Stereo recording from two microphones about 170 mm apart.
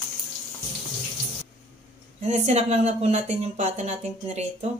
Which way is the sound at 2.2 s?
40° right (ahead or behind).